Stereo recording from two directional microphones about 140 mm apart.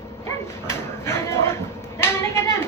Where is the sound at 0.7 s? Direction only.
20° left (ahead or behind).